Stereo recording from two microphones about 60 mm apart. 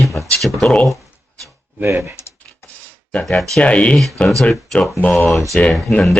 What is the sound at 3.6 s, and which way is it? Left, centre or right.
Speech, left.